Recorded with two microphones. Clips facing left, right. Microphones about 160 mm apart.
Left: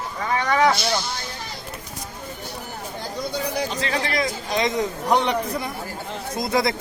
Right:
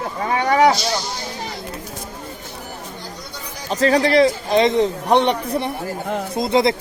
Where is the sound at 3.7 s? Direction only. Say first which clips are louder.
Right 10 dB; 40° right (ahead or behind).